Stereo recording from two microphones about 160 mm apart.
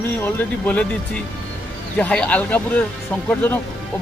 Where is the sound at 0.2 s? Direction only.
10° left (ahead or behind).